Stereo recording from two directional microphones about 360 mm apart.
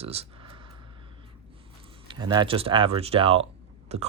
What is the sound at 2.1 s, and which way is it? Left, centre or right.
Speech, centre.